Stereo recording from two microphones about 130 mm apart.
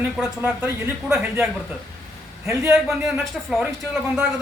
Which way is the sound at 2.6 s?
5° right (ahead or behind).